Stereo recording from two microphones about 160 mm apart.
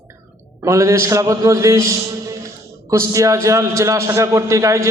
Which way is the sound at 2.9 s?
20° right (ahead or behind).